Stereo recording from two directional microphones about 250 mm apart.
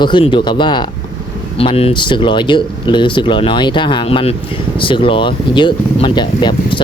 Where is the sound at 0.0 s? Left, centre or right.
Centre.